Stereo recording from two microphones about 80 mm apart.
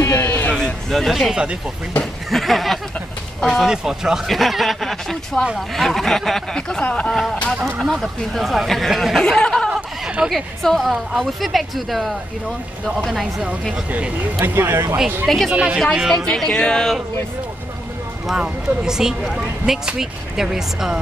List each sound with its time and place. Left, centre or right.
0.2 s a sound: left
0.6 s speech: centre
2.3 s speech: centre
7.6 s speech: centre
10.0 s a woman's voice: centre
14.4 s speech: right
15.2 s speech: centre
15.5 s speech: centre
16.3 s speech: centre
18.2 s speech: centre